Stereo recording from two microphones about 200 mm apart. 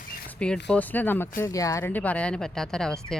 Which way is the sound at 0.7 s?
10° left (ahead or behind).